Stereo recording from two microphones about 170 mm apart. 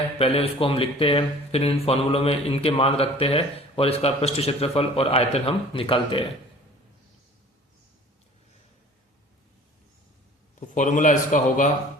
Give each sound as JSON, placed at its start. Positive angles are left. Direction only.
{"t": 0.2, "sound": "speech", "side_deg": 35}
{"t": 10.7, "sound": "speech", "side_deg": 50}